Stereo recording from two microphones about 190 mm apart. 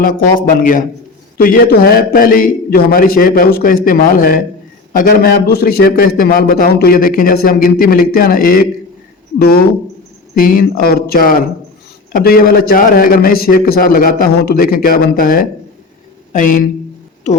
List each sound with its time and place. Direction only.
0.0 s a man's voice: 45° left (ahead or behind)